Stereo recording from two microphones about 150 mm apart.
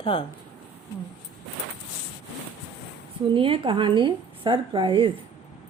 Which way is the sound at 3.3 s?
35° right (ahead or behind).